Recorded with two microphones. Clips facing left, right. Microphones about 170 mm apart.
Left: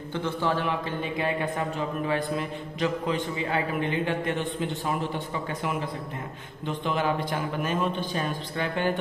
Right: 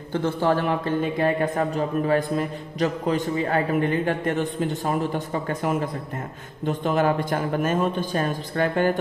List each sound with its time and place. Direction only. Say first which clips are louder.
0.1 s speech: right 6 dB; 45° right (ahead or behind)